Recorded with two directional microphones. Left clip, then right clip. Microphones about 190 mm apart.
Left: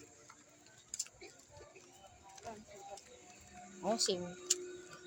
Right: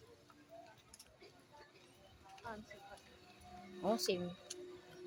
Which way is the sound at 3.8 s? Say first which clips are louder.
Left 2 dB; 10° right (ahead or behind).